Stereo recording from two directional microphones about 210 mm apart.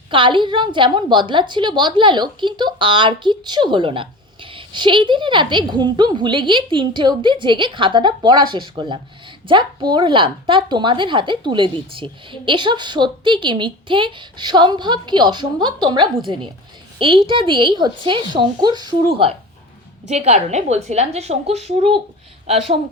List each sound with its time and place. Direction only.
0.1 s a woman's voice: 25° right (ahead or behind)